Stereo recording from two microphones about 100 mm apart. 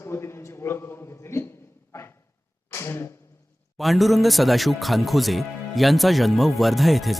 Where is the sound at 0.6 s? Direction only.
25° left (ahead or behind).